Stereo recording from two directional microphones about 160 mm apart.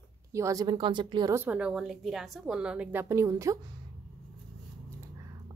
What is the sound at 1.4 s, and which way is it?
A woman's voice, 10° right (ahead or behind).